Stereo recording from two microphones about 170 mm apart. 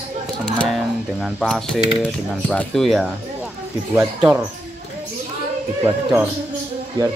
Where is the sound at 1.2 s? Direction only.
5° left (ahead or behind).